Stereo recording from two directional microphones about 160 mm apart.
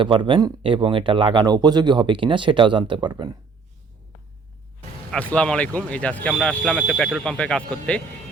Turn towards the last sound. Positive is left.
turn(degrees=5)  # may be behind; listen again after turning